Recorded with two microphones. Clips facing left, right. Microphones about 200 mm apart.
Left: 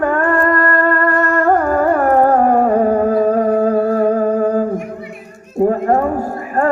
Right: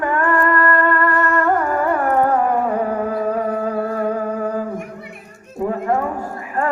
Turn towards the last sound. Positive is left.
turn(degrees=45)  # may be behind; listen again after turning